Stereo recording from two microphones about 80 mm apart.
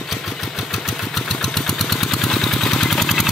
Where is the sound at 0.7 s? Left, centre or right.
Centre.